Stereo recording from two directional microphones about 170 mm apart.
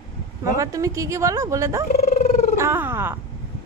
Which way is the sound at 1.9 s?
40° left (ahead or behind).